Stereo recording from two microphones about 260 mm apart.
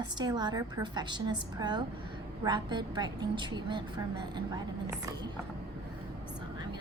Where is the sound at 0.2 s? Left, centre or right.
Centre.